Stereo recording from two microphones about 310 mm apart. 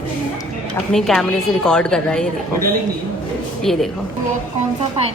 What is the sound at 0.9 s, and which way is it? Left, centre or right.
A woman's voice, centre.